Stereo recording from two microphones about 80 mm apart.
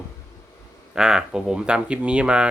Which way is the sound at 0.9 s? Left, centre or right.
Centre.